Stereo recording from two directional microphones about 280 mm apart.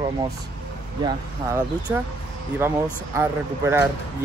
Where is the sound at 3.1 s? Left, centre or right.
Centre.